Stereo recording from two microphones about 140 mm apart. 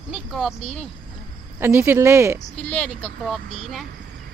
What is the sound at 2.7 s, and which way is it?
Speech, 10° left (ahead or behind).